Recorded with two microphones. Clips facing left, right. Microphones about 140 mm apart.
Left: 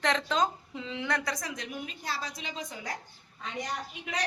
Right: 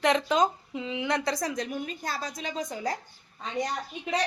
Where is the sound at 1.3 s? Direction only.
35° right (ahead or behind).